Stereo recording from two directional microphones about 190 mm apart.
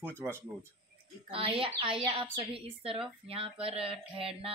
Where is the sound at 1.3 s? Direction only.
30° right (ahead or behind).